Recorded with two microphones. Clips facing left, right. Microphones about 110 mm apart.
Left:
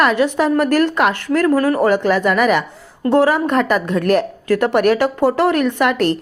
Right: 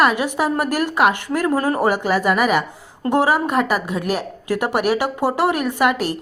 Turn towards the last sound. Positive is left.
turn(degrees=-10)  # may be behind; listen again after turning